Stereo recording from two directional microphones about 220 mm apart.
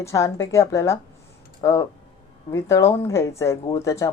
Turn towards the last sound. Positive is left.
turn(degrees=15)  # may be behind; listen again after turning